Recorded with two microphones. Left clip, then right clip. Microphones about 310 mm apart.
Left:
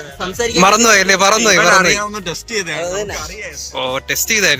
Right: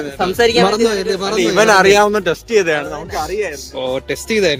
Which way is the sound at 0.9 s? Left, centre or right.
Left.